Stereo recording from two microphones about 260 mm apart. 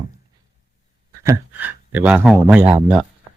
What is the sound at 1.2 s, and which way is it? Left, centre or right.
Speech, centre.